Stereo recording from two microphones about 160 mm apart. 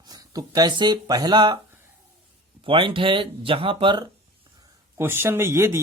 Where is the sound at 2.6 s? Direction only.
35° right (ahead or behind).